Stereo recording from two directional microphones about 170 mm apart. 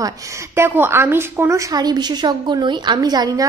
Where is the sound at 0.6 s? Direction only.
15° right (ahead or behind).